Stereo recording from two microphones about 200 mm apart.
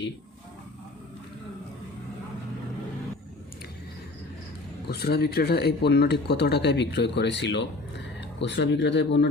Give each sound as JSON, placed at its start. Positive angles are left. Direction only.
{"t": 4.9, "sound": "speech", "side_deg": 55}